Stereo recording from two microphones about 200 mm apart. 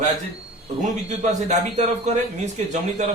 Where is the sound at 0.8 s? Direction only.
35° right (ahead or behind).